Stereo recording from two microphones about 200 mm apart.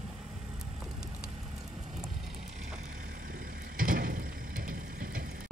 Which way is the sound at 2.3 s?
35° right (ahead or behind).